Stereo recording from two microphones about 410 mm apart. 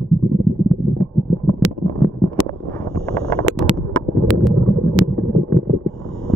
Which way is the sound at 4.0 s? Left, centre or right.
Centre.